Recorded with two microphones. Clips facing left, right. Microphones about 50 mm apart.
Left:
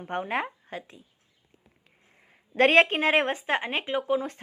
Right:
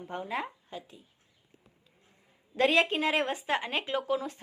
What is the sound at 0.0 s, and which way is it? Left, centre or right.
Speech, left.